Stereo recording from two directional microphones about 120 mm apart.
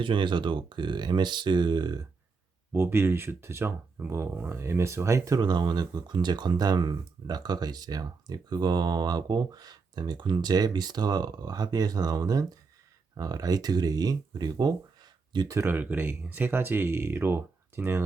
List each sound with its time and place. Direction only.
0.0 s speech: 40° right (ahead or behind)
2.7 s speech: 20° right (ahead or behind); by 15.5 s 35° right (ahead or behind)
15.5 s speech: 15° right (ahead or behind)